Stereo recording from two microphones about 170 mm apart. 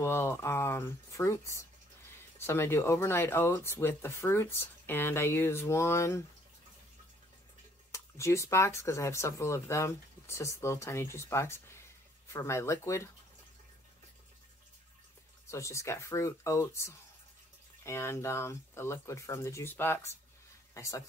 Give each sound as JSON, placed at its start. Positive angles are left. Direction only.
{"t": 0.0, "sound": "speech", "side_deg": 15}
{"t": 7.9, "sound": "speech", "side_deg": 15}
{"t": 15.4, "sound": "speech", "side_deg": 15}